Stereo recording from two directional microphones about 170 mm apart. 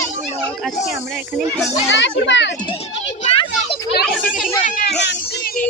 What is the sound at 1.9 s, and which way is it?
Speech, 90° left.